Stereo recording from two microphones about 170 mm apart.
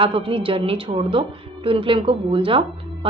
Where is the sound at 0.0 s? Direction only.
30° right (ahead or behind).